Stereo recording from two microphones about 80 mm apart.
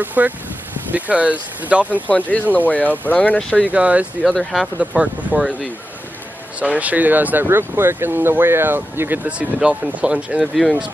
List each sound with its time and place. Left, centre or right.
0.0 s speech: right
2.0 s speech: centre
3.3 s speech: centre
3.6 s speech: centre
4.3 s speech: centre
4.7 s speech: centre
6.6 s speech: centre
9.2 s speech: centre
10.4 s speech: centre